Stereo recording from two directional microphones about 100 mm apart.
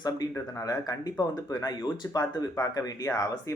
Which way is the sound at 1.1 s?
40° left (ahead or behind).